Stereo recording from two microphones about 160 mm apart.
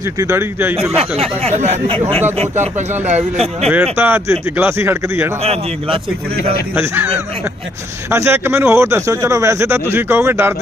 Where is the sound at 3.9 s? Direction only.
15° right (ahead or behind).